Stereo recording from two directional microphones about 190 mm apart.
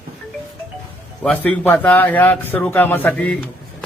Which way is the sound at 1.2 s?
5° left (ahead or behind).